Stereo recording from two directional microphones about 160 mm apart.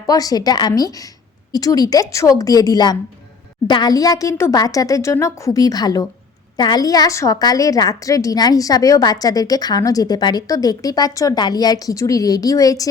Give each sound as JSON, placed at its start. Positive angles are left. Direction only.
{"t": 0.1, "sound": "a woman's voice", "side_deg": 25}